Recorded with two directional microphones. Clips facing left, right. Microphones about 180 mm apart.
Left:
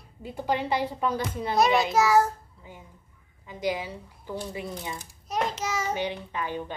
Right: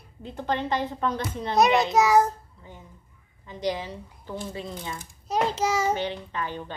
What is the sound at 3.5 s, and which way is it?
A woman's voice, 10° left (ahead or behind).